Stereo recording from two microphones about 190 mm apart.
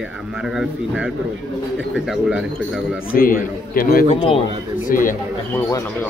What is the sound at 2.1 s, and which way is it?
Speech, 5° right (ahead or behind).